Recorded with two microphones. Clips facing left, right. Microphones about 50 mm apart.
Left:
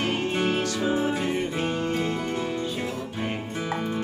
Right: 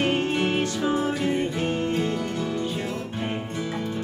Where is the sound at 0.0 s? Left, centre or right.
Right.